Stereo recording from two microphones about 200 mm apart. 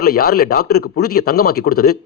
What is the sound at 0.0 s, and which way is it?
Speech, 50° left (ahead or behind).